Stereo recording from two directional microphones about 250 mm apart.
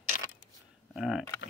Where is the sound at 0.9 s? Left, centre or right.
Centre.